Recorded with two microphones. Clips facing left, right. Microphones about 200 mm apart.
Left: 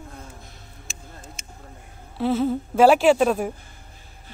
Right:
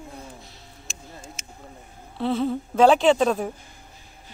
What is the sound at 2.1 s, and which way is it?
Speech, 5° left (ahead or behind).